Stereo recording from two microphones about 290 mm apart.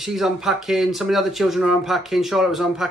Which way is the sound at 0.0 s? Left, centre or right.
Centre.